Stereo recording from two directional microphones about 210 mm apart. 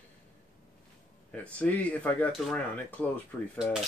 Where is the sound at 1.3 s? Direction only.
5° left (ahead or behind).